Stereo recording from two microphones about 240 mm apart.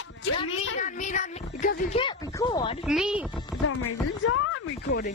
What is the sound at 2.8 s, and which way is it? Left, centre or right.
Music, centre.